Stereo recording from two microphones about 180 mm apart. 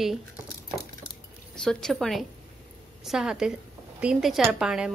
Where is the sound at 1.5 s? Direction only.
5° left (ahead or behind).